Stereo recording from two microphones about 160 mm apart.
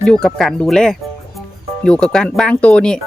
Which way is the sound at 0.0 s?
5° left (ahead or behind).